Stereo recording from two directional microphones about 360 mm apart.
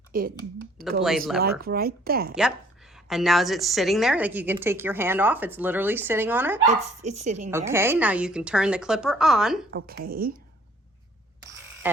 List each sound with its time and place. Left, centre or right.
0.1 s speech: right
0.9 s a woman's voice: centre
1.4 s speech: right
2.9 s a woman's voice: centre
7.1 s speech: centre
7.5 s a woman's voice: centre
9.7 s speech: right